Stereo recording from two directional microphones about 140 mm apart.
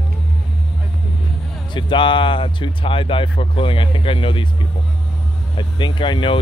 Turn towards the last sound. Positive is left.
turn(degrees=35)  # may be behind; listen again after turning